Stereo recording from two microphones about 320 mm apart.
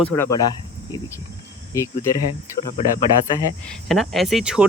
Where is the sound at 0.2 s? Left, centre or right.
Centre.